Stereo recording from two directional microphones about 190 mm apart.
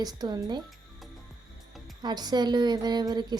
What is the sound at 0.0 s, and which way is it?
Speech, 20° right (ahead or behind).